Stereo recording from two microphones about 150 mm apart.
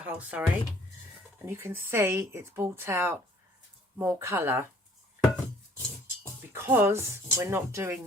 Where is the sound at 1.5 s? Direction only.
15° right (ahead or behind).